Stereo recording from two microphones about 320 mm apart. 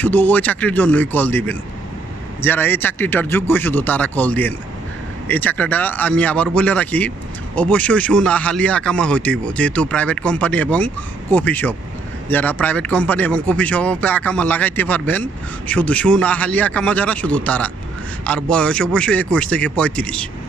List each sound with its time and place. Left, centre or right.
0.0 s speech: centre